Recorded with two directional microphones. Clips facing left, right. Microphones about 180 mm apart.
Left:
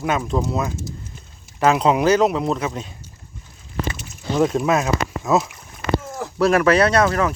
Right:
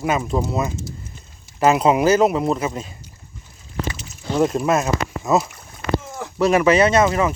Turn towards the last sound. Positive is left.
turn(degrees=-5)  # may be behind; listen again after turning